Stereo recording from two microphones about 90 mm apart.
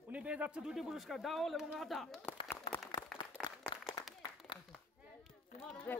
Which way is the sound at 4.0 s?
60° left (ahead or behind).